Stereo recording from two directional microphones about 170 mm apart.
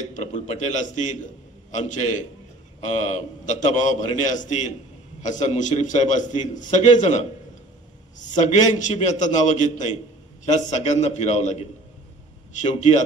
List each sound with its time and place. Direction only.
0.1 s a man's voice: 45° left (ahead or behind)